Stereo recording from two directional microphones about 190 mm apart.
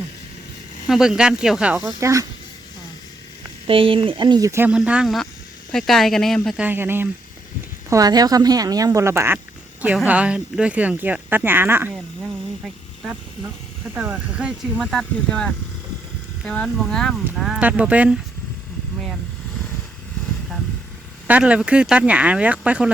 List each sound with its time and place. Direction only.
0.9 s speech: 5° right (ahead or behind)
1.8 s speech: 15° right (ahead or behind)
3.7 s speech: 30° right (ahead or behind); by 12.3 s 10° right (ahead or behind)
13.9 s speech: 10° right (ahead or behind)
21.2 s speech: 5° right (ahead or behind)